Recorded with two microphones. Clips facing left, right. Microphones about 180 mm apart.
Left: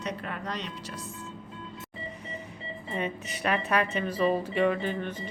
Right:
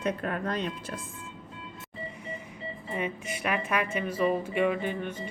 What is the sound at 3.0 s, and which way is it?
Speech, 10° right (ahead or behind).